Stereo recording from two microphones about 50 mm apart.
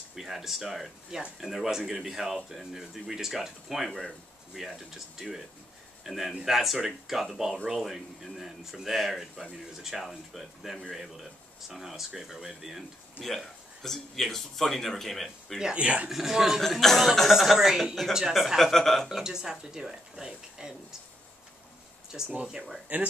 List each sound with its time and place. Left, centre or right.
0.1 s speech: centre
13.2 s speech: centre
15.7 s speech: right
16.1 s speech: centre
16.6 s speech: centre
19.2 s speech: centre
22.1 s speech: centre